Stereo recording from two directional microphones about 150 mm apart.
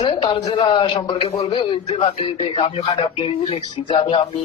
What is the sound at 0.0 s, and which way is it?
Speech, 35° left (ahead or behind).